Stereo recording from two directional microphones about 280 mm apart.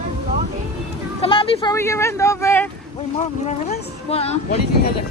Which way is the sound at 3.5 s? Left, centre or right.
Left.